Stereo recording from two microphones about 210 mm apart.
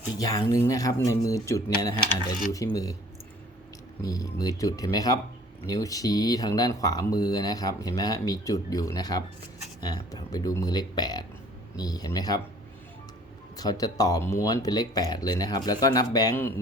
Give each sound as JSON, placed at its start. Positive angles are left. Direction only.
{"t": 0.2, "sound": "speech", "side_deg": 15}
{"t": 4.0, "sound": "speech", "side_deg": 15}
{"t": 13.6, "sound": "speech", "side_deg": 20}